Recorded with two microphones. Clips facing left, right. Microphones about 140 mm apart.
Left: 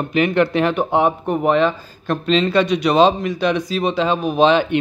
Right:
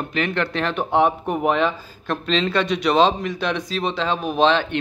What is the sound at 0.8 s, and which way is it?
Speech, centre (ahead or behind).